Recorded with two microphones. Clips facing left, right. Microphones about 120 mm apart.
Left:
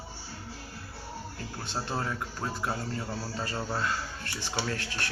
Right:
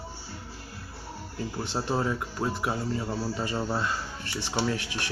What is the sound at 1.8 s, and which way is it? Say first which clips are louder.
Speech: right 6 dB; 15° right (ahead or behind).